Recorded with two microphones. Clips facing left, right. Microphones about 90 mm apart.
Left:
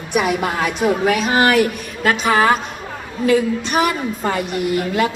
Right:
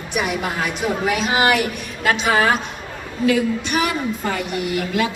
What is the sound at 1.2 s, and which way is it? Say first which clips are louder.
A woman's voice: left 2 dB; 40° left (ahead or behind).